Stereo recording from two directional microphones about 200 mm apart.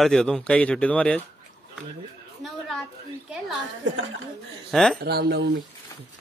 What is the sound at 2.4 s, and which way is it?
Speech, centre (ahead or behind).